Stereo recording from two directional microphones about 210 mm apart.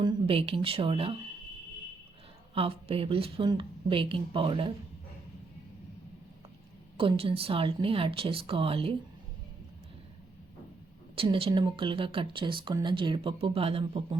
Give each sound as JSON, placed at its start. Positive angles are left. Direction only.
{"t": 0.0, "sound": "speech", "side_deg": -25}
{"t": 2.6, "sound": "speech", "side_deg": -25}
{"t": 6.9, "sound": "speech", "side_deg": -25}
{"t": 11.1, "sound": "speech", "side_deg": -25}